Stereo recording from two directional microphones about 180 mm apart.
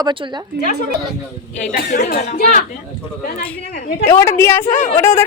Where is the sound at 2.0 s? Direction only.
60° left (ahead or behind).